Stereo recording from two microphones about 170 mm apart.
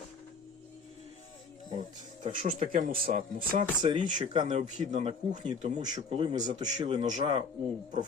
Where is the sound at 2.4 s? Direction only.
55° right (ahead or behind).